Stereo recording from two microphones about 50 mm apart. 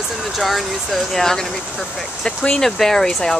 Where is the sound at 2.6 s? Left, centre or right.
Centre.